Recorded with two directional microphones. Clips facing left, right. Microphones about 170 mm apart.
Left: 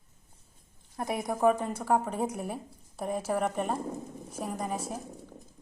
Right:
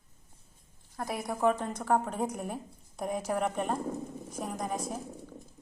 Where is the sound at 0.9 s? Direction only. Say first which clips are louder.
Left 3 dB; 20° left (ahead or behind).